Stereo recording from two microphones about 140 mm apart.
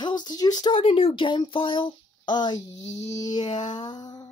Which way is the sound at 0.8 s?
45° left (ahead or behind).